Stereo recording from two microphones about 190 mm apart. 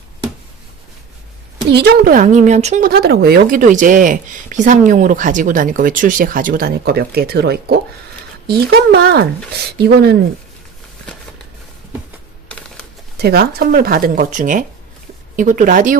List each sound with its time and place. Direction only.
1.7 s speech: 55° right (ahead or behind); by 2.8 s 35° right (ahead or behind)
2.8 s speech: 55° right (ahead or behind)
12.5 s a sound: 5° left (ahead or behind)
13.1 s speech: 55° right (ahead or behind)